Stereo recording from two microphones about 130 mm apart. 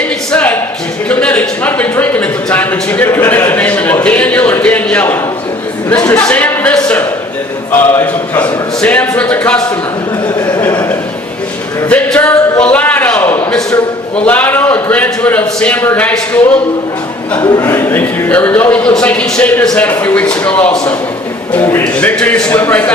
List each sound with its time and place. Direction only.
0.3 s a sound: 10° left (ahead or behind)
1.1 s speech: 10° left (ahead or behind)
10.6 s speech: 25° left (ahead or behind)
11.9 s speech: 10° left (ahead or behind)
17.4 s speech: 30° left (ahead or behind)
17.7 s speech: 15° left (ahead or behind)